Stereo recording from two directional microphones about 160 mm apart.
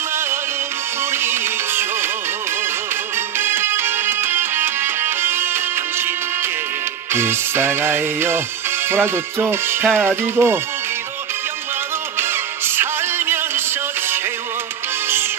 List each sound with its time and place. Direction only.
1.1 s music: 15° right (ahead or behind)
3.3 s music: 15° right (ahead or behind)
7.1 s music: 15° right (ahead or behind)
12.2 s music: 15° right (ahead or behind)